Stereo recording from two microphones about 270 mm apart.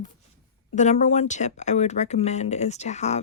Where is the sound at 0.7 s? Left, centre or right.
Left.